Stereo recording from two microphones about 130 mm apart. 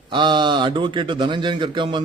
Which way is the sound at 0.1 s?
40° right (ahead or behind).